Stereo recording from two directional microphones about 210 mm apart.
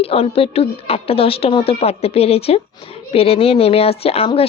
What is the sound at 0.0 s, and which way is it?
Speech, 30° left (ahead or behind).